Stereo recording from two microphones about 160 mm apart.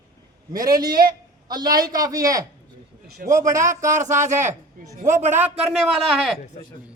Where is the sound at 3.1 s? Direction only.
65° right (ahead or behind).